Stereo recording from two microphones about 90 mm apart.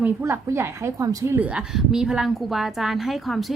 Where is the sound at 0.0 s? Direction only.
25° right (ahead or behind).